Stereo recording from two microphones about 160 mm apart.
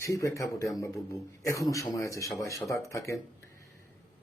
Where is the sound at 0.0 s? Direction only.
20° left (ahead or behind).